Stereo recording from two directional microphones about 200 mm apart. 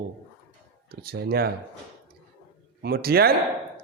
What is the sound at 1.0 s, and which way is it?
Speech, 50° right (ahead or behind).